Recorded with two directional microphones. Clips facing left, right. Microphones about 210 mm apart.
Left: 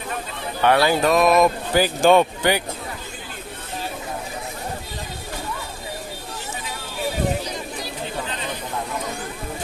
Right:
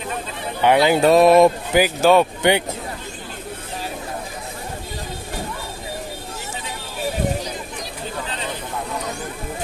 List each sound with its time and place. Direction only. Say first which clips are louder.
0.6 s speech: right 3 dB; 15° right (ahead or behind)
1.1 s speech: right 6 dB; 30° right (ahead or behind)
1.7 s speech: right 1 dB; 10° right (ahead or behind)
2.4 s speech: right 3 dB; 20° right (ahead or behind)